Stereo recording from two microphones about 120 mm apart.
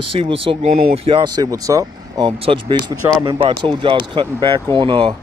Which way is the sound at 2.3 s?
50° right (ahead or behind).